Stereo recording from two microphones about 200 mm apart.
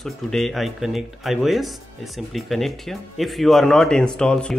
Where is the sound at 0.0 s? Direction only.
Centre (ahead or behind).